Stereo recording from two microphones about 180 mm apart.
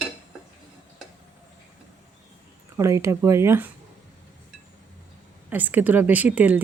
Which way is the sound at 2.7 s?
15° right (ahead or behind).